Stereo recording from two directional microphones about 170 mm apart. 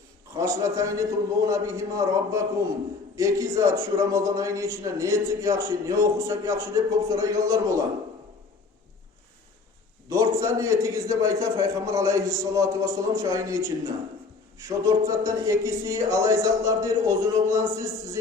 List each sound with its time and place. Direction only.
0.3 s a man's voice: 15° right (ahead or behind)
10.1 s a man's voice: 20° right (ahead or behind)